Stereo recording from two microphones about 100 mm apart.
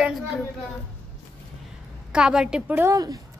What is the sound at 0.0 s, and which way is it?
Speech, centre (ahead or behind).